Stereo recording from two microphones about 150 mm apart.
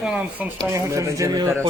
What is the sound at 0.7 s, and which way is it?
Speech, 20° right (ahead or behind).